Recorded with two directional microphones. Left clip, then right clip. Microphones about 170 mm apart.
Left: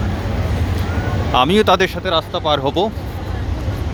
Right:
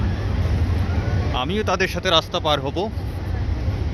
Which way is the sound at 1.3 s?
30° left (ahead or behind).